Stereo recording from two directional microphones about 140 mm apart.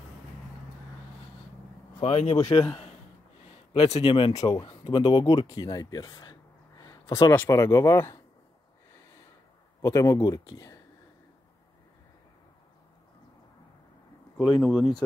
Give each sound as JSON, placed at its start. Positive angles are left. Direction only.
{"t": 2.0, "sound": "speech", "side_deg": 45}
{"t": 2.3, "sound": "speech", "side_deg": 25}
{"t": 3.7, "sound": "speech", "side_deg": 45}
{"t": 6.8, "sound": "a sound", "side_deg": 25}
{"t": 7.3, "sound": "speech", "side_deg": 20}
{"t": 9.8, "sound": "speech", "side_deg": 20}
{"t": 14.3, "sound": "speech", "side_deg": 0}